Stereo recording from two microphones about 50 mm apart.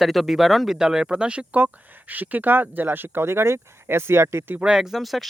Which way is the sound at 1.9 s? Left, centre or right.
Right.